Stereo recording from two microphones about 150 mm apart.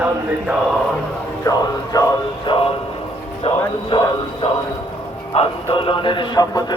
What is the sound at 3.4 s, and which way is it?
A man's voice, 35° left (ahead or behind).